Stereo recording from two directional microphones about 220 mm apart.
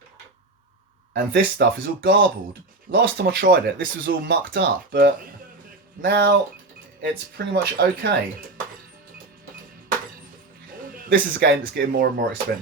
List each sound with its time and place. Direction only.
1.1 s speech: 45° right (ahead or behind)
10.8 s a sound: 40° right (ahead or behind)
11.1 s speech: 50° right (ahead or behind)